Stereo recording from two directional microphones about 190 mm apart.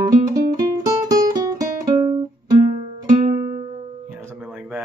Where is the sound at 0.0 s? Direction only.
20° right (ahead or behind).